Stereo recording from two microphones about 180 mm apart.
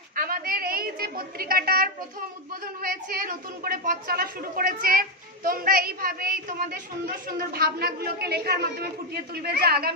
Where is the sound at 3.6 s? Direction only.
50° right (ahead or behind).